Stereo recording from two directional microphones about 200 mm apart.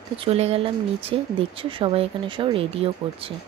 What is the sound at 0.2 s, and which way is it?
Speech, 30° right (ahead or behind).